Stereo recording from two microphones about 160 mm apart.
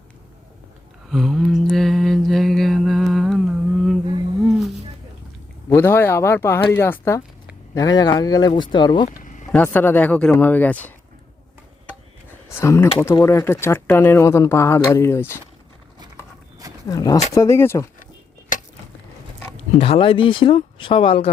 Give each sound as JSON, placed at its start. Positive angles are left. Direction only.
{"t": 1.1, "sound": "mantra", "side_deg": 0}
{"t": 4.4, "sound": "a sound", "side_deg": -5}
{"t": 5.6, "sound": "speech", "side_deg": 15}
{"t": 9.2, "sound": "vehicle", "side_deg": 50}
{"t": 9.5, "sound": "speech", "side_deg": 10}
{"t": 12.5, "sound": "speech", "side_deg": 15}
{"t": 16.9, "sound": "speech", "side_deg": 20}
{"t": 19.5, "sound": "speech", "side_deg": 40}